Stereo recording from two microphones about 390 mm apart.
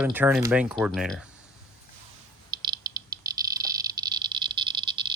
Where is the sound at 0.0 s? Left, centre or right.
Centre.